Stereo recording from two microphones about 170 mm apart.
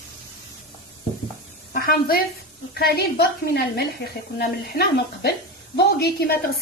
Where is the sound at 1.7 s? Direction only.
60° left (ahead or behind).